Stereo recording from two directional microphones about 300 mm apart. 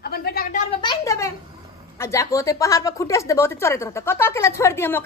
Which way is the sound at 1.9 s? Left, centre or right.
Centre.